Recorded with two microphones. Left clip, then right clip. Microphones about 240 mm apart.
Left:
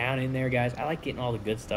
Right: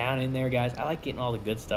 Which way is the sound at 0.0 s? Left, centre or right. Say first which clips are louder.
Even; centre.